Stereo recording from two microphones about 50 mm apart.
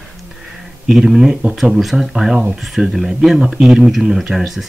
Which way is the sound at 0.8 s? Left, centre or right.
Centre.